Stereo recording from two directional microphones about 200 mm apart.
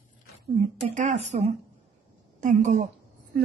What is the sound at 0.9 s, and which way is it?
A woman's voice, 35° right (ahead or behind).